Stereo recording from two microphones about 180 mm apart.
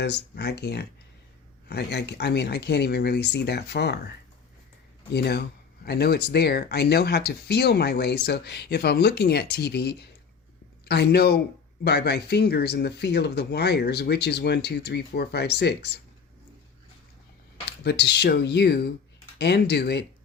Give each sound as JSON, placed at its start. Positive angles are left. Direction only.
{"t": 0.0, "sound": "speech", "side_deg": 65}
{"t": 5.1, "sound": "speech", "side_deg": 65}
{"t": 17.8, "sound": "speech", "side_deg": 65}